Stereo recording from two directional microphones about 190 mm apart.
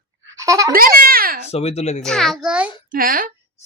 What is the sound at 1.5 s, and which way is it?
Speech, 35° left (ahead or behind).